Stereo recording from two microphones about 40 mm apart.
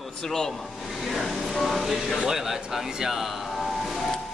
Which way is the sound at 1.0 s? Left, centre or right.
Centre.